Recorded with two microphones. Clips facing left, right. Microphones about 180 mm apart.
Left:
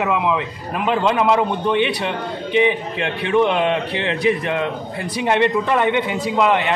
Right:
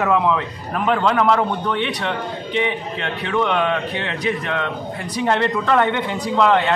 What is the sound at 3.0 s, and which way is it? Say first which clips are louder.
A man's voice: left 4 dB; 20° left (ahead or behind).